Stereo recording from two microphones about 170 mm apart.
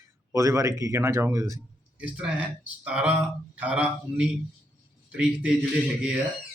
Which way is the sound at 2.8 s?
5° right (ahead or behind).